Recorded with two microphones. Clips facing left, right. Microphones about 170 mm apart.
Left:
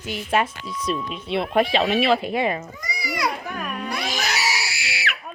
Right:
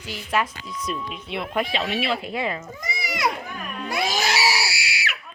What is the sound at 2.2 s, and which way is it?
Speech, 20° left (ahead or behind).